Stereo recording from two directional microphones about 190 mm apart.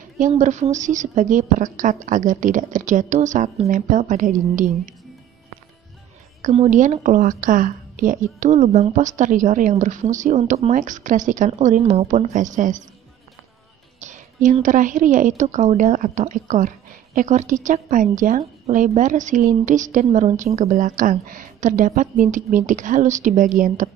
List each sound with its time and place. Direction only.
0.2 s a woman's voice: 40° right (ahead or behind)
6.4 s a woman's voice: 35° right (ahead or behind)
13.9 s a woman's voice: 40° right (ahead or behind)